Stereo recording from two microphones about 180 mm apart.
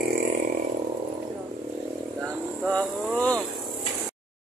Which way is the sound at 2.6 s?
5° left (ahead or behind).